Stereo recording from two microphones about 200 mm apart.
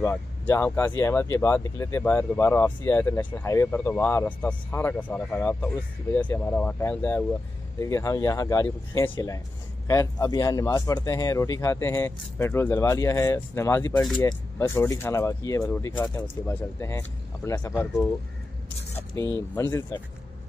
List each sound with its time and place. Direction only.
0.0 s speech: 10° left (ahead or behind)
19.5 s speech: 15° left (ahead or behind)